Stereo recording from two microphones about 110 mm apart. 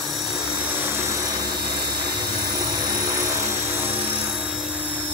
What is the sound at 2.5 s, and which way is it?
Helicopter, 35° right (ahead or behind).